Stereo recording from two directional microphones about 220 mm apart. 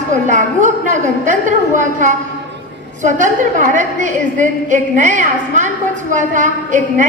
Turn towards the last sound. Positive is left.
turn(degrees=-35)  # may be behind; listen again after turning